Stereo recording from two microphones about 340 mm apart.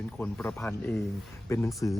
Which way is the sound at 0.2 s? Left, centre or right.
Centre.